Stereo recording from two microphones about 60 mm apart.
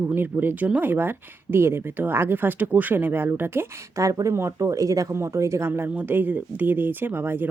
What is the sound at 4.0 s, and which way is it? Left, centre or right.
Speech, right.